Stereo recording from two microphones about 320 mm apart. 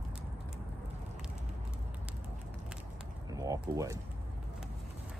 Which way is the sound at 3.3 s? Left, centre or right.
Centre.